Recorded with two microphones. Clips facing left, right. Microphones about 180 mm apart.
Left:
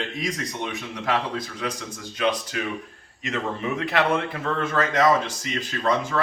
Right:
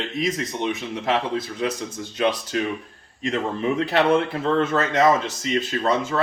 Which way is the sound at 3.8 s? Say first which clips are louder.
Right 4 dB; 30° right (ahead or behind).